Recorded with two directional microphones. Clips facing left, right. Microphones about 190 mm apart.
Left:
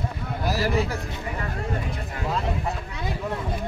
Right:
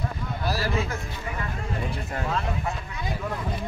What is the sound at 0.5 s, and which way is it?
Speech, 20° left (ahead or behind).